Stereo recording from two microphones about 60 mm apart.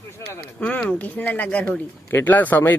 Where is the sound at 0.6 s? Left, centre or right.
Left.